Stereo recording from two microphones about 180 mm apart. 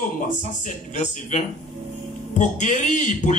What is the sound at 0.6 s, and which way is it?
Speech, 40° left (ahead or behind).